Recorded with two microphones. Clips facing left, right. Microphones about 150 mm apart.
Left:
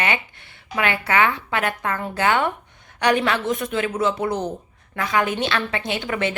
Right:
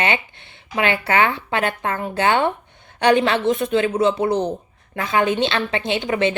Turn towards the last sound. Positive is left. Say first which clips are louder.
# right 4 dB
turn(degrees=-25)  # may be behind; listen again after turning